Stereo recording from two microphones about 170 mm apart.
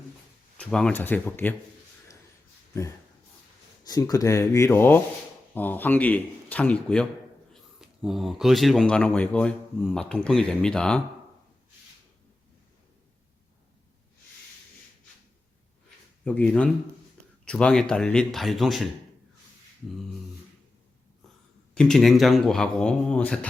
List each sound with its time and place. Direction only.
0.5 s speech: 5° left (ahead or behind)
3.8 s speech: 20° left (ahead or behind); by 11.0 s 5° left (ahead or behind)
16.2 s speech: 5° left (ahead or behind)
21.8 s speech: 5° left (ahead or behind)